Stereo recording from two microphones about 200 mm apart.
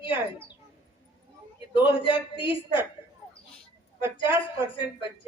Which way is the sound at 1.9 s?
25° left (ahead or behind).